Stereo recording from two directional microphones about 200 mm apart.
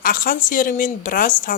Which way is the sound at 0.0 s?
45° left (ahead or behind).